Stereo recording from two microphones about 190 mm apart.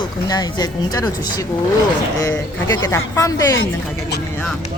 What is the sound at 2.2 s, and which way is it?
Speech, 15° left (ahead or behind).